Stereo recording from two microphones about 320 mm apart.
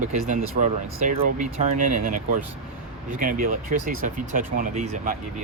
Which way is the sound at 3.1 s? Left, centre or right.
Right.